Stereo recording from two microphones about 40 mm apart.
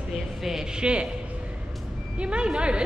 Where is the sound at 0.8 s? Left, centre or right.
Right.